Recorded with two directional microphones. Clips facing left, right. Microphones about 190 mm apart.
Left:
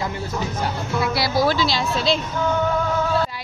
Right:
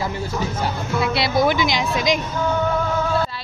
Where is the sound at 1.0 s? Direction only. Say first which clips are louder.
Right 1 dB; 20° right (ahead or behind).